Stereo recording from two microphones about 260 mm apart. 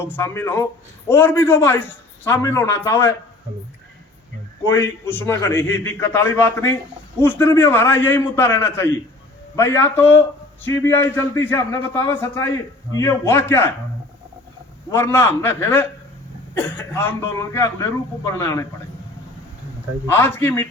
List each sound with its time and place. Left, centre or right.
0.0 s a man's voice: centre
4.6 s a man's voice: centre
14.8 s a man's voice: centre
20.1 s a man's voice: centre